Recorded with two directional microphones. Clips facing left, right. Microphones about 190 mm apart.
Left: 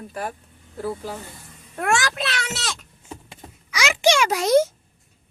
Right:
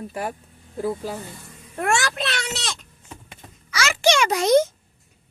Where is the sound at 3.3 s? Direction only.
15° left (ahead or behind).